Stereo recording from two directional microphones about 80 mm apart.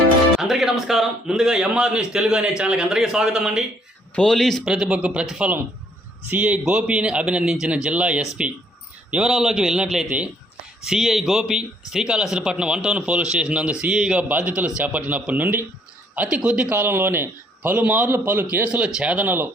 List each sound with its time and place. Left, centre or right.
0.3 s speech: centre
4.1 s speech: centre
4.6 s speech: centre
6.2 s speech: centre
10.1 s a man's voice: right
10.8 s speech: centre
13.9 s speech: centre
14.2 s a man's voice: centre
16.7 s a man's voice: right